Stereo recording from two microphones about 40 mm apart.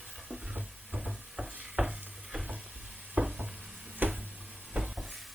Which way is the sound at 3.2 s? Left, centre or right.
Right.